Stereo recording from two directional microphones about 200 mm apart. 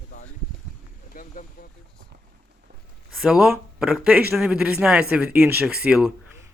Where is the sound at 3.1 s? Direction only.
5° right (ahead or behind).